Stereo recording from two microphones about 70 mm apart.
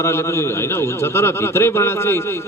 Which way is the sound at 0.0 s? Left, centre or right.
Left.